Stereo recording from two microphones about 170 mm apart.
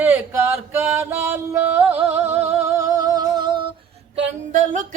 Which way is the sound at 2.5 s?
15° right (ahead or behind).